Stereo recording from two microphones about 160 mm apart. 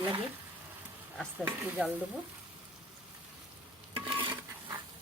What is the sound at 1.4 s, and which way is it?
Speech, 15° right (ahead or behind).